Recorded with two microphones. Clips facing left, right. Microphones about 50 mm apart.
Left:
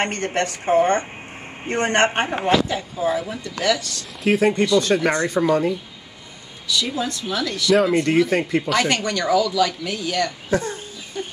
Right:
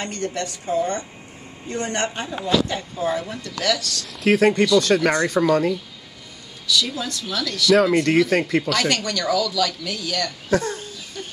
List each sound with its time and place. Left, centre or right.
0.0 s a woman's voice: left
2.7 s a woman's voice: centre
3.4 s speech: left
4.2 s speech: centre
4.5 s speech: left
6.8 s speech: left